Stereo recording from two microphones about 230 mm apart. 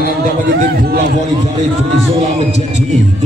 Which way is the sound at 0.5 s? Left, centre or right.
Right.